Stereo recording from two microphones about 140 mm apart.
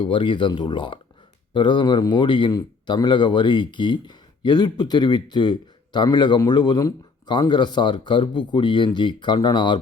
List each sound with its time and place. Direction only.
0.0 s a man's voice: 35° left (ahead or behind)